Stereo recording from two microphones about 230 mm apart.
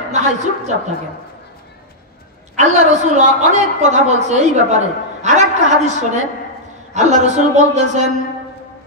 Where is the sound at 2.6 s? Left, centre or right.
Right.